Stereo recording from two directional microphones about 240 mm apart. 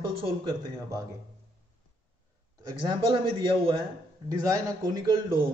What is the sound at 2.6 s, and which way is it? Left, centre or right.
A man's voice, centre.